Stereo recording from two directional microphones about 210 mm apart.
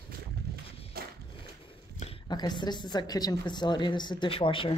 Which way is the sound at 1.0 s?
50° right (ahead or behind).